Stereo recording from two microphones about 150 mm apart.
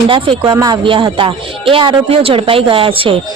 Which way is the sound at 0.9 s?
35° right (ahead or behind).